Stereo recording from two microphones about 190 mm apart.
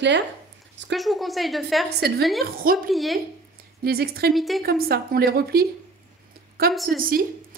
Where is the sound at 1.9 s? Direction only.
60° right (ahead or behind).